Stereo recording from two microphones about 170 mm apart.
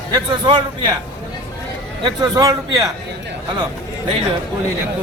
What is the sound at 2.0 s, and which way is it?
Speech, 25° right (ahead or behind).